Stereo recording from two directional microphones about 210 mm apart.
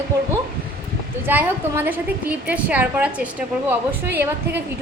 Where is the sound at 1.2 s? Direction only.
10° right (ahead or behind).